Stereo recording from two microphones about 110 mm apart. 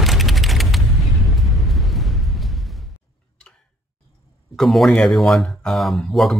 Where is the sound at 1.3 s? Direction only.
Centre (ahead or behind).